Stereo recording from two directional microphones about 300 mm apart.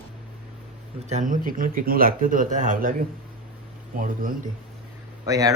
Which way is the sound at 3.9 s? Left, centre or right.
Right.